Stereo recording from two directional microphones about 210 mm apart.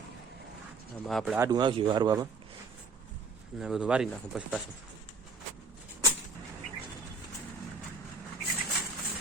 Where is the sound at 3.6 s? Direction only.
5° right (ahead or behind).